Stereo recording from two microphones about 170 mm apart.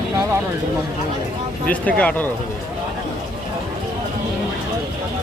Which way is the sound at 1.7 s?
10° left (ahead or behind).